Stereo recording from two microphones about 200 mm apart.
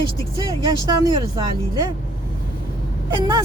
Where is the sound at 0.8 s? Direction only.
20° right (ahead or behind).